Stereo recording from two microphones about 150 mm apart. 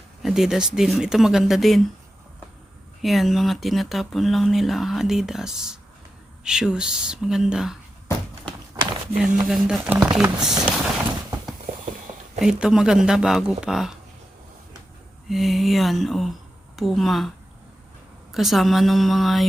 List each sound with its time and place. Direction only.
0.2 s speech: centre (ahead or behind)
3.0 s speech: centre (ahead or behind)
9.2 s speech: 5° right (ahead or behind)
12.4 s speech: 5° right (ahead or behind)
15.3 s speech: centre (ahead or behind)